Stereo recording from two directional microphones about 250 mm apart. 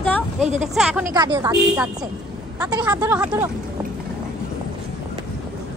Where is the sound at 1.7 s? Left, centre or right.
Centre.